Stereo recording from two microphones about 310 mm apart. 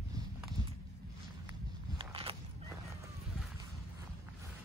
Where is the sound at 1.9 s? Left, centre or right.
Centre.